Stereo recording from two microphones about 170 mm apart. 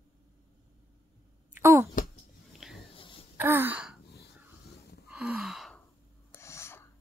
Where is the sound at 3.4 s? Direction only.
10° right (ahead or behind).